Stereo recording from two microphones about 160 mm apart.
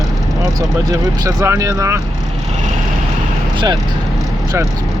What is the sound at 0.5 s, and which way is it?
Speech, 20° right (ahead or behind).